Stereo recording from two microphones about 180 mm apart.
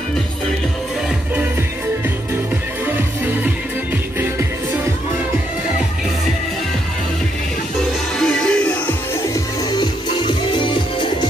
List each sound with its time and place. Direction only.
8.2 s music: 5° left (ahead or behind)
9.3 s music: 20° left (ahead or behind)